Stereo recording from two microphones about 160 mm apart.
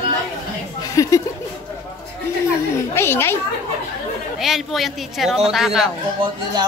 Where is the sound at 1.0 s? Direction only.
20° left (ahead or behind).